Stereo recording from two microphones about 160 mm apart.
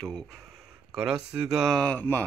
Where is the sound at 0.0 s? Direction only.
5° left (ahead or behind).